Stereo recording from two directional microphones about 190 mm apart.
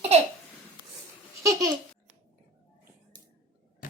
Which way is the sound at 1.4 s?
15° right (ahead or behind).